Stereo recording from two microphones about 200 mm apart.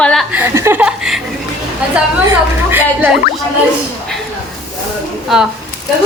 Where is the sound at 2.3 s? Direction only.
10° right (ahead or behind).